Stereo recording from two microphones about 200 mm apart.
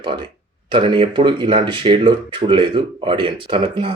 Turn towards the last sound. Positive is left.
turn(degrees=-25)  # may be behind; listen again after turning